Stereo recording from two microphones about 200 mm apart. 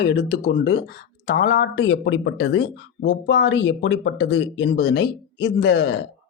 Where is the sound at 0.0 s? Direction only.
55° left (ahead or behind).